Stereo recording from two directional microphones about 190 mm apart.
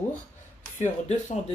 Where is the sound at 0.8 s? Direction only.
40° left (ahead or behind).